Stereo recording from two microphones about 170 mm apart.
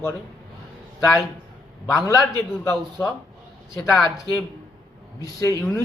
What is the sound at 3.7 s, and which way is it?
Speech, centre (ahead or behind).